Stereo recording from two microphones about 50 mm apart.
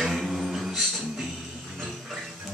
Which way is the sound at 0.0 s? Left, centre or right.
Centre.